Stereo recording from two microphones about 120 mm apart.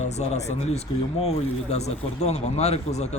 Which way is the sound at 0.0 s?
65° left (ahead or behind).